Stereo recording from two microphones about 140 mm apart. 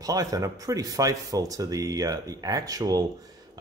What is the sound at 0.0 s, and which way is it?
Speech, 25° right (ahead or behind).